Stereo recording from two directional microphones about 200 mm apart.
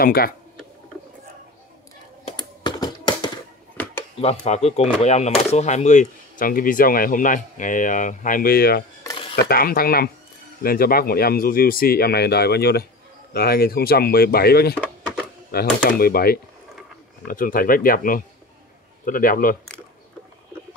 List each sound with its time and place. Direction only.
0.0 s speech: 50° left (ahead or behind)
2.2 s computer keyboard: 20° left (ahead or behind)
3.7 s dishes: 5° left (ahead or behind)
4.2 s speech: 30° left (ahead or behind); by 8.8 s 50° left (ahead or behind)
9.0 s stir: 25° left (ahead or behind)
9.5 s speech: 45° left (ahead or behind)
14.8 s a sound: 5° left (ahead or behind)
15.5 s speech: 50° left (ahead or behind)